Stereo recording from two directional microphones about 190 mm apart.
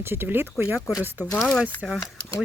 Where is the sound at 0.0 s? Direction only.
10° right (ahead or behind).